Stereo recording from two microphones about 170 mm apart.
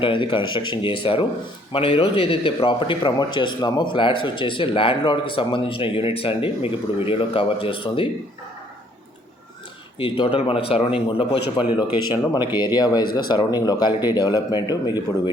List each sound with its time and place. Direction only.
0.0 s a man's voice: 30° left (ahead or behind)
10.0 s a man's voice: 30° left (ahead or behind)